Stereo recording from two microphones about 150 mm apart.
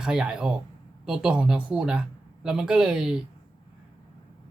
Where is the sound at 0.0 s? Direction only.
5° right (ahead or behind).